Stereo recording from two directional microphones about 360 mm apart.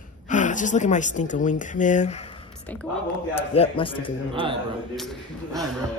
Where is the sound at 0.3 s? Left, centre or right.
Left.